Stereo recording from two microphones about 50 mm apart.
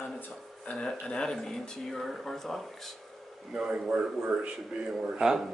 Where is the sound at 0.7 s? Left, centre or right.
Left; by 2.6 s centre.